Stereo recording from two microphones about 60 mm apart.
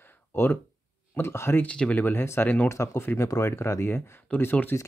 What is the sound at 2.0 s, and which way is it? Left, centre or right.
Speech, left.